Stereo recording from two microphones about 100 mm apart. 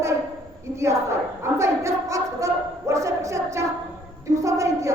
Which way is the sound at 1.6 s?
30° right (ahead or behind).